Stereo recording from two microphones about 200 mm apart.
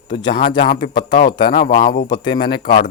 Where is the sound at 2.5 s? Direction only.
50° left (ahead or behind).